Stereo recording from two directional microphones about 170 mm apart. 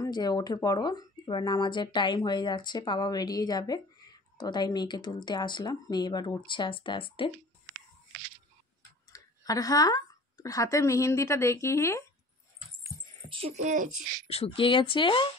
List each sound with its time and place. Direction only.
0.0 s speech: 25° left (ahead or behind)
9.1 s speech: 20° left (ahead or behind)
13.3 s speech: 40° right (ahead or behind)
14.2 s speech: 35° left (ahead or behind)